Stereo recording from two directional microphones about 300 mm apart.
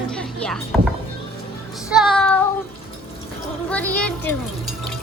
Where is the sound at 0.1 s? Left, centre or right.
Centre.